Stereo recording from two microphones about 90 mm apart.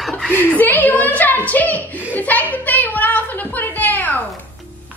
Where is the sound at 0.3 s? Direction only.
20° left (ahead or behind).